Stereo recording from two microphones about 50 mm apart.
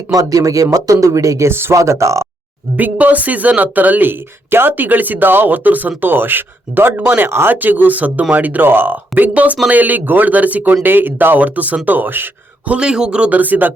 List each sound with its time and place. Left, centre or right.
0.4 s speech: right
1.5 s speech: right
1.7 s speech: right
2.7 s speech: right
9.3 s a man's voice: right
11.3 s speech: right
12.6 s a man's voice: right
13.3 s speech: right